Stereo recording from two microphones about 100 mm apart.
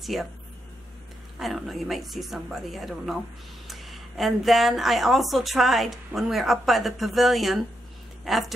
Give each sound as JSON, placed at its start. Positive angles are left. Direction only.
{"t": 0.0, "sound": "speech", "side_deg": 0}
{"t": 1.4, "sound": "a woman's voice", "side_deg": 0}